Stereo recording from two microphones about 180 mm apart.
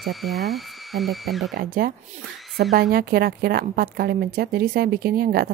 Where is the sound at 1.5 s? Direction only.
50° right (ahead or behind).